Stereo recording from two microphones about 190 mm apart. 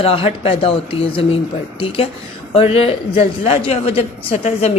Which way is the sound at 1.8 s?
30° left (ahead or behind).